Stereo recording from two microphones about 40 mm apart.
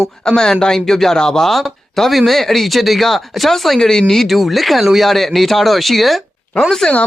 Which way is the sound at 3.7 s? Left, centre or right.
Centre.